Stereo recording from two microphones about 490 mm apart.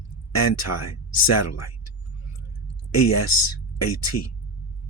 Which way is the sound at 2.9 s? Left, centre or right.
Left.